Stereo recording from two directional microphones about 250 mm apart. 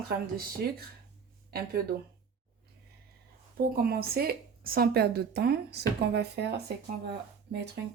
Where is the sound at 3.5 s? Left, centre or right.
Right.